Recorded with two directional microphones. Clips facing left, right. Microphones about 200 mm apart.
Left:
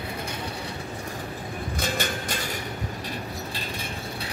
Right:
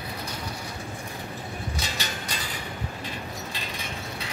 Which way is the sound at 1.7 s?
55° left (ahead or behind).